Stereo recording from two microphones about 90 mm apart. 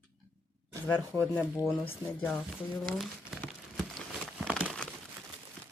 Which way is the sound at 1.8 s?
90° left.